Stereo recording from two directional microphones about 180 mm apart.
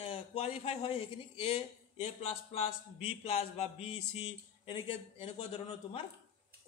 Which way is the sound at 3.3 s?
35° left (ahead or behind).